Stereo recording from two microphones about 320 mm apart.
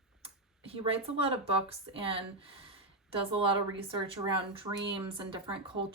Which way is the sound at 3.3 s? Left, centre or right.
Centre.